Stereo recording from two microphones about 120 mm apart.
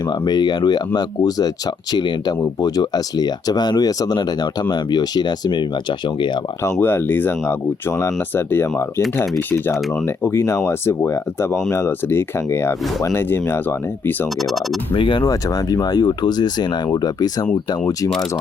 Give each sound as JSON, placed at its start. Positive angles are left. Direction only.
{"t": 0.1, "sound": "speech", "side_deg": 35}
{"t": 6.7, "sound": "speech", "side_deg": 20}
{"t": 10.2, "sound": "speech", "side_deg": 20}
{"t": 14.9, "sound": "speech", "side_deg": 40}